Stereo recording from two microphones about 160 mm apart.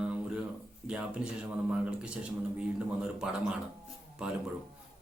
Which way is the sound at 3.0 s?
5° right (ahead or behind).